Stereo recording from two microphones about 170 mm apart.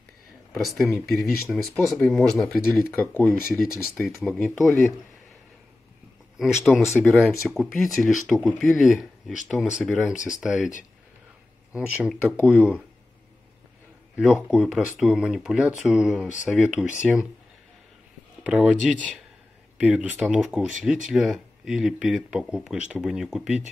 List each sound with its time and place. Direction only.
0.6 s speech: centre (ahead or behind)
3.6 s speech: centre (ahead or behind)
6.3 s speech: centre (ahead or behind)
11.7 s speech: 5° right (ahead or behind)
14.1 s speech: 5° right (ahead or behind)
18.4 s speech: 5° right (ahead or behind)